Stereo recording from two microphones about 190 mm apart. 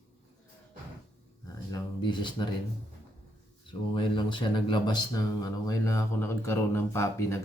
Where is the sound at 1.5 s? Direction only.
20° left (ahead or behind).